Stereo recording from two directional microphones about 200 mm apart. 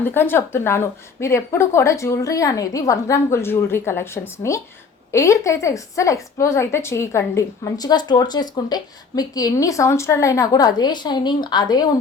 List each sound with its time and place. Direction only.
0.0 s a woman's voice: 10° left (ahead or behind)